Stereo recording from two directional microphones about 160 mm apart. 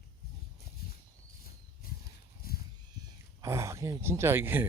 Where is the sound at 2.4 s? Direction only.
70° left (ahead or behind).